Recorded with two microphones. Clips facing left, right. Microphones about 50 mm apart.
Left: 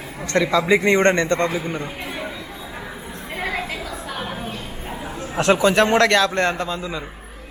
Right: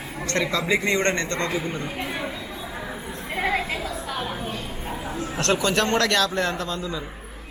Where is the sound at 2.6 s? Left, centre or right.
Centre.